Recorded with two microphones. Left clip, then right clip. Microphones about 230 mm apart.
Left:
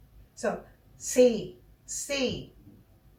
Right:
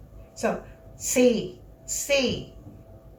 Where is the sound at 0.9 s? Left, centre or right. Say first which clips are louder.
Even; centre.